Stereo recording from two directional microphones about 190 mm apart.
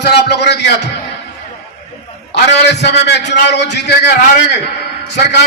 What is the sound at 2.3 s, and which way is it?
A man's voice, 65° left (ahead or behind).